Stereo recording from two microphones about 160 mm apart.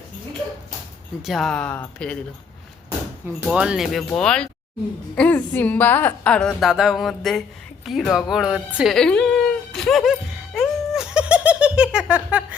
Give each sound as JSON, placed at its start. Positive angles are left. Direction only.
{"t": 1.2, "sound": "a woman's voice", "side_deg": 0}
{"t": 3.2, "sound": "a woman's voice", "side_deg": -5}
{"t": 7.9, "sound": "a sound", "side_deg": 0}